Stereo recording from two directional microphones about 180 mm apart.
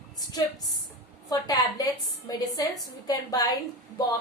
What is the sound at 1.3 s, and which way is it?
A woman's voice, 20° left (ahead or behind).